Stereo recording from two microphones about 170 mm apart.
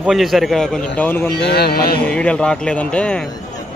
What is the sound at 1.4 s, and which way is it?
Music, 70° left (ahead or behind).